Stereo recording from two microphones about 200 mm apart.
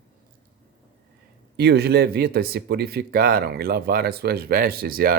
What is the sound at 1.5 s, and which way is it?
Speech, 55° right (ahead or behind).